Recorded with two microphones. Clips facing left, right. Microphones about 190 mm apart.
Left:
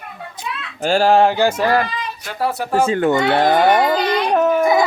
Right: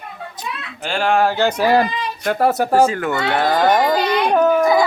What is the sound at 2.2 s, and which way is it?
Speech, 50° right (ahead or behind).